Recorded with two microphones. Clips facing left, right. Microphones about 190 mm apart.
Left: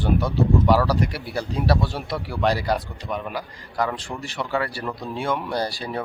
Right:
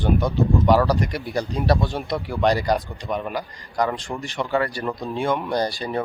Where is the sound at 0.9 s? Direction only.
5° left (ahead or behind).